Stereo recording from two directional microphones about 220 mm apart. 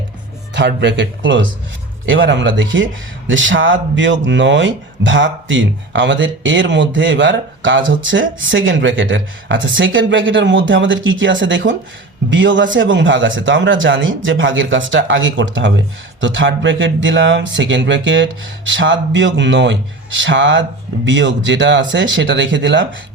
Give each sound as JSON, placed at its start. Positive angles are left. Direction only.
{"t": 0.5, "sound": "speech", "side_deg": -50}